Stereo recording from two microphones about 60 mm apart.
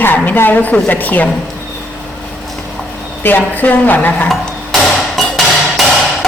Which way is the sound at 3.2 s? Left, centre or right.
Left.